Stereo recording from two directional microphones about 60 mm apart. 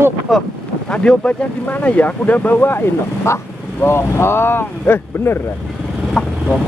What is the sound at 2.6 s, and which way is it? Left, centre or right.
Speech, left.